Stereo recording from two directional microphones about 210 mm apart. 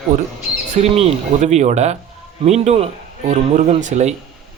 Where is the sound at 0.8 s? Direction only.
30° right (ahead or behind).